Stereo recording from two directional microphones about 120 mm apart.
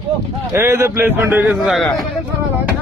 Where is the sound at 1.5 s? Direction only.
Centre (ahead or behind).